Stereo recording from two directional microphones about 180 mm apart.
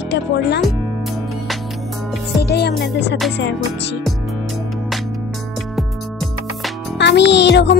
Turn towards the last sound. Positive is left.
turn(degrees=75)  # may be behind; listen again after turning